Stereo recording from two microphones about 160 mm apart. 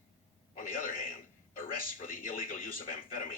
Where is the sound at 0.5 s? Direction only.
55° left (ahead or behind).